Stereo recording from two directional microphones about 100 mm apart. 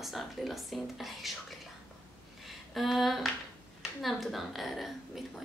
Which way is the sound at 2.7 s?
Centre (ahead or behind).